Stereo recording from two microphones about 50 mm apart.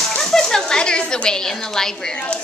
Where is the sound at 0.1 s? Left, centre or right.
Centre.